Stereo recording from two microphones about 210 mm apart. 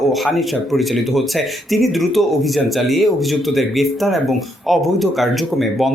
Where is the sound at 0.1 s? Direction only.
Centre (ahead or behind).